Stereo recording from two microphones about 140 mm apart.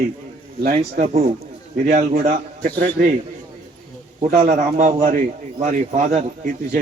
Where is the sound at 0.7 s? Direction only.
50° right (ahead or behind); by 2.7 s 70° right (ahead or behind).